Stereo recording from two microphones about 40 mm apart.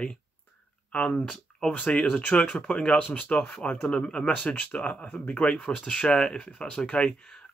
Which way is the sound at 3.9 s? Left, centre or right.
Left.